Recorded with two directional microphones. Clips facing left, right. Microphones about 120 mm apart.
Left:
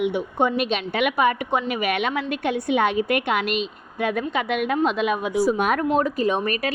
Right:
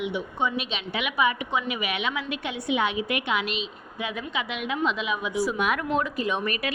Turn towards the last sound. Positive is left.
turn(degrees=40)  # may be behind; listen again after turning